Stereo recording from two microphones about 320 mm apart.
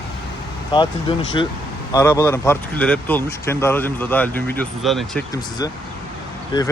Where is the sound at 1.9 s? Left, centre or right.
Centre.